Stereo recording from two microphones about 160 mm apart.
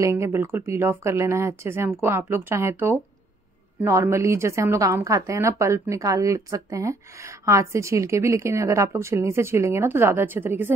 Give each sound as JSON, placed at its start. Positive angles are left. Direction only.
{"t": 0.0, "sound": "a woman's voice", "side_deg": -15}